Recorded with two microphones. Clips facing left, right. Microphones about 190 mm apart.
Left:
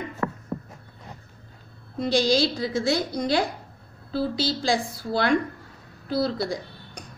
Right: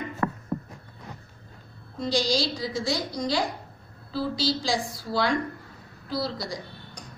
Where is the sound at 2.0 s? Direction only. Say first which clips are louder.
Left 4 dB; 60° left (ahead or behind).